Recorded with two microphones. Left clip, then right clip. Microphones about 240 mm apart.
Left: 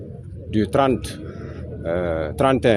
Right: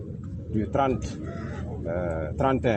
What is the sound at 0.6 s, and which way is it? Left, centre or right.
Speech, left.